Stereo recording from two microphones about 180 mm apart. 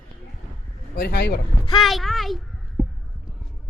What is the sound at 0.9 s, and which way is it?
Speech, 60° left (ahead or behind).